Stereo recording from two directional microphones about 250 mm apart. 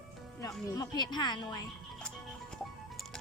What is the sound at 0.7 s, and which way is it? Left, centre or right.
Speech, centre.